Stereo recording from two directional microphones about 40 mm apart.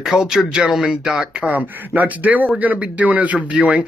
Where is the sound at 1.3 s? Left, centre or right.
Right.